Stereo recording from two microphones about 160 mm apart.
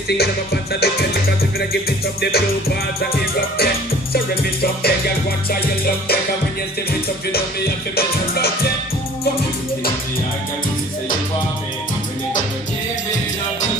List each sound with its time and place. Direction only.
0.2 s music: 80° left